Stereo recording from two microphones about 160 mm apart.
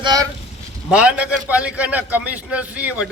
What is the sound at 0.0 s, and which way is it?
Speech, 25° right (ahead or behind).